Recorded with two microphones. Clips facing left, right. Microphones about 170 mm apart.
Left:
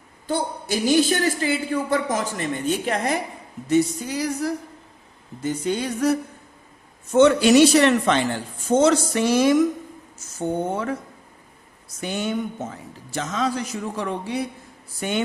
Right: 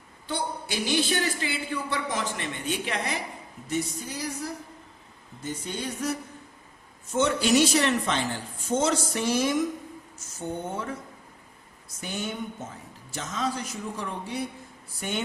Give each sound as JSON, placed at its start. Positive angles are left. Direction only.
{"t": 0.3, "sound": "a woman's voice", "side_deg": 45}
{"t": 3.7, "sound": "a man's voice", "side_deg": 80}
{"t": 7.1, "sound": "speech", "side_deg": 65}
{"t": 11.9, "sound": "a man's voice", "side_deg": 80}